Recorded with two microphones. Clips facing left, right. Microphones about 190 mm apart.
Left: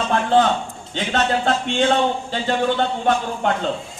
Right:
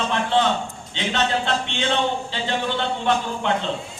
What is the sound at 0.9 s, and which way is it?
Speech, 45° left (ahead or behind).